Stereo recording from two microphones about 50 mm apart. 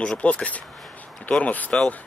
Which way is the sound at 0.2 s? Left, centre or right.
Left.